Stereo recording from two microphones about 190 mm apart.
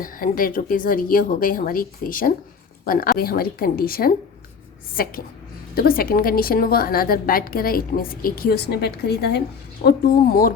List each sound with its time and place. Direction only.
0.0 s a woman's voice: 45° left (ahead or behind)